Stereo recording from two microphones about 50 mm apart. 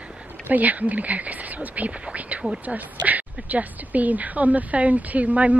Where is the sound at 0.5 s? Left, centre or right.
Right.